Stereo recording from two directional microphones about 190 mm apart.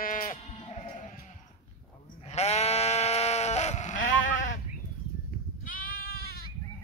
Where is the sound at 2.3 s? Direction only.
35° left (ahead or behind).